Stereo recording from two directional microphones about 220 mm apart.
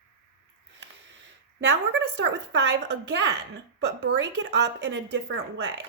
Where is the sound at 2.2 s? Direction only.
55° right (ahead or behind).